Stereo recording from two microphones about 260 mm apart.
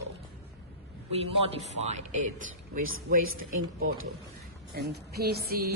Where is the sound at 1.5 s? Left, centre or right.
Right.